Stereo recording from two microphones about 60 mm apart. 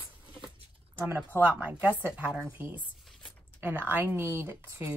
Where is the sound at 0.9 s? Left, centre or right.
Right.